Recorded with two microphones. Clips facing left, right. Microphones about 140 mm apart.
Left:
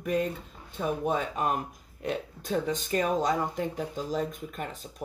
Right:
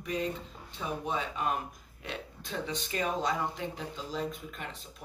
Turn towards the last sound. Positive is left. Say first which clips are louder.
# left 6 dB
turn(degrees=45)  # may be behind; listen again after turning